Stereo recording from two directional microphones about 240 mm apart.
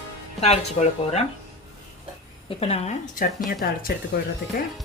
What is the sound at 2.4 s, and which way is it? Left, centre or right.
Speech, left.